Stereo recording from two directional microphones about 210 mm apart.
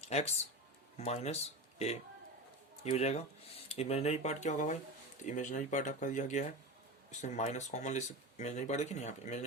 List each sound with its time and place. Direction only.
0.1 s speech: 30° left (ahead or behind)